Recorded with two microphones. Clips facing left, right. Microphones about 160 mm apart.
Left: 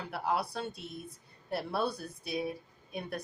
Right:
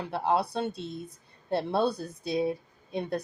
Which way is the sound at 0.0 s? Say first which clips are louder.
Right 6 dB; 25° right (ahead or behind).